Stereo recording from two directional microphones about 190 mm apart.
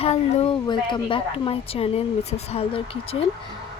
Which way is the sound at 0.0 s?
30° left (ahead or behind).